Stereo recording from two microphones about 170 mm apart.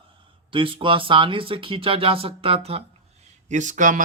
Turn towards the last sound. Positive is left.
turn(degrees=-50)  # may be behind; listen again after turning